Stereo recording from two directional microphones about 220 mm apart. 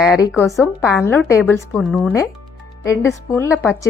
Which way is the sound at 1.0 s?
10° left (ahead or behind).